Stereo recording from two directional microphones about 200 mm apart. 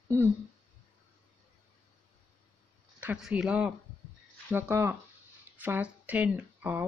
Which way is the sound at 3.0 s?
5° right (ahead or behind).